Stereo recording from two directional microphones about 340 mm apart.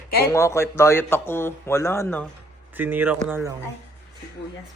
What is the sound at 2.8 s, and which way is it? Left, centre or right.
Speech, centre.